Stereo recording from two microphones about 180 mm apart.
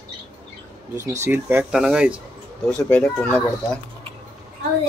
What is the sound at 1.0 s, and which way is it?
Speech, 15° right (ahead or behind).